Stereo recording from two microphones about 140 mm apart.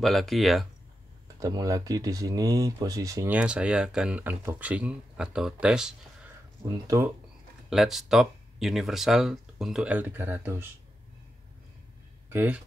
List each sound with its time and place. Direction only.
0.0 s speech: centre (ahead or behind)
1.4 s speech: 25° right (ahead or behind)
3.3 s speech: 10° right (ahead or behind)
7.7 s speech: centre (ahead or behind); by 10.7 s 15° right (ahead or behind)
12.3 s speech: 10° right (ahead or behind)